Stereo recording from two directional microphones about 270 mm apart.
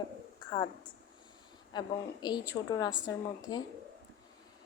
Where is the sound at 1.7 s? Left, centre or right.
Centre.